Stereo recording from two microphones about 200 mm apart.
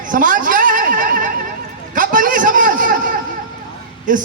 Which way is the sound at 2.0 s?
45° right (ahead or behind).